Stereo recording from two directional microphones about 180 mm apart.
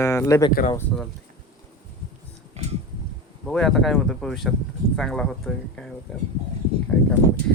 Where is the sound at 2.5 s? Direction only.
35° right (ahead or behind).